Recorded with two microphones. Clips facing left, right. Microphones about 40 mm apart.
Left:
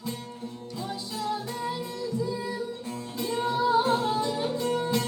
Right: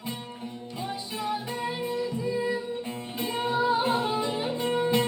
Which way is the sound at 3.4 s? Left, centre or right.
Right.